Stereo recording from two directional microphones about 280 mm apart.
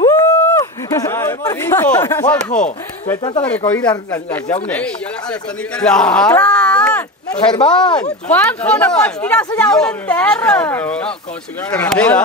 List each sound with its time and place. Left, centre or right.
0.0 s speech: centre
3.1 s speech: centre
3.4 s speech: centre